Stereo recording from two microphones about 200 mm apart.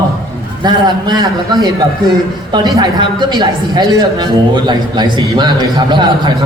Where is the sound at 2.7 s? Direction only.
20° right (ahead or behind).